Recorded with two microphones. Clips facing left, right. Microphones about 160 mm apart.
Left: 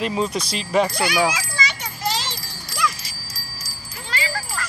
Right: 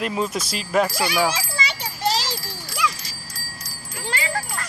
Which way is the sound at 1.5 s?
30° right (ahead or behind).